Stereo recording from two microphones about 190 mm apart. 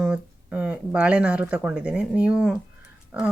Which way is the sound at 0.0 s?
5° right (ahead or behind).